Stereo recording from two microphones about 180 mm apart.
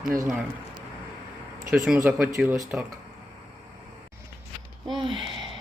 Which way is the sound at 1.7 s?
5° right (ahead or behind).